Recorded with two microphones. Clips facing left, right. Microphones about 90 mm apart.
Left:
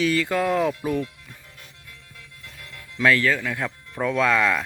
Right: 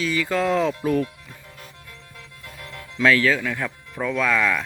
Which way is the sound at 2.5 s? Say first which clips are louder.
Right 6 dB; 25° right (ahead or behind).